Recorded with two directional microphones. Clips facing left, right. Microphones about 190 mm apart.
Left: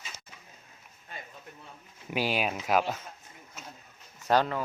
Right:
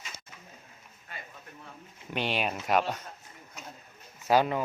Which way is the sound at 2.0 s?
5° left (ahead or behind).